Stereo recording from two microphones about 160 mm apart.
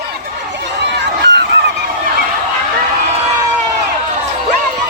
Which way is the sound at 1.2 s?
90° right.